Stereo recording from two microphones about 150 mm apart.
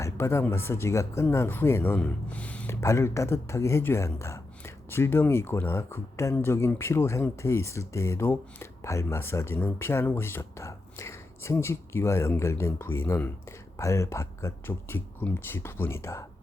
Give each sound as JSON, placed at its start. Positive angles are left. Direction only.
{"t": 0.0, "sound": "speech", "side_deg": 20}
{"t": 2.8, "sound": "speech", "side_deg": 20}